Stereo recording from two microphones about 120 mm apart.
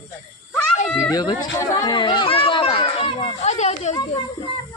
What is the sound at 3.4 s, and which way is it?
Speech, 70° left (ahead or behind).